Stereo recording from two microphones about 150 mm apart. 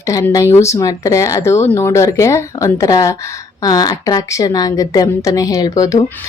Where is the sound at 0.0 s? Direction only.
20° left (ahead or behind).